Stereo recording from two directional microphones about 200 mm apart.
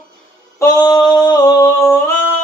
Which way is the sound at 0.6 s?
15° left (ahead or behind).